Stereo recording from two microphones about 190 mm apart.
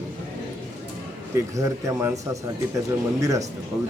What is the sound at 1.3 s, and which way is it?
A man's voice, 15° right (ahead or behind).